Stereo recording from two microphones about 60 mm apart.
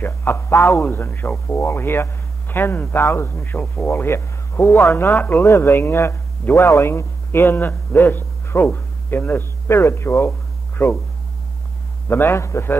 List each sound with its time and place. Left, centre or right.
0.0 s speech: left
3.8 s speech: left
5.1 s speech: left
5.4 s a man's voice: left
10.8 s speech: left
12.1 s speech: left
12.4 s speech: left